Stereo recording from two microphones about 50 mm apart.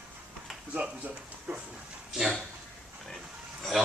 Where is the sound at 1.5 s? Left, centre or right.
Right.